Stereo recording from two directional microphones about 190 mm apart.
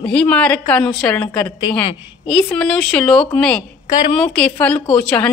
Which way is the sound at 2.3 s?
5° left (ahead or behind).